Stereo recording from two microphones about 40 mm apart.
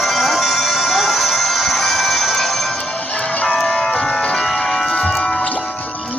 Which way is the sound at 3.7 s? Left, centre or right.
Centre.